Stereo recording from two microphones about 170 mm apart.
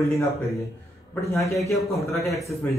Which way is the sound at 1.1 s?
15° left (ahead or behind).